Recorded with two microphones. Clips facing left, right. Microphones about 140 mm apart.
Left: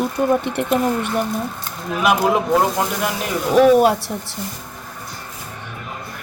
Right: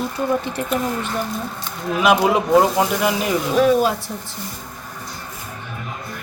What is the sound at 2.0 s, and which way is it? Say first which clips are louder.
Speech: right 1 dB; centre (ahead or behind).